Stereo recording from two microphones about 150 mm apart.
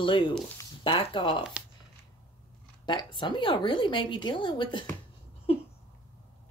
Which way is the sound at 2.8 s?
30° left (ahead or behind).